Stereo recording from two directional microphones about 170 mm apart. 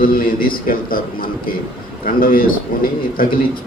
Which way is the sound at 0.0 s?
60° left (ahead or behind).